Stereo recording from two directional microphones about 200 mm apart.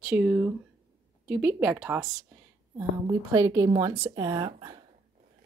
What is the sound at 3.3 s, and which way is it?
A woman's voice, 20° right (ahead or behind).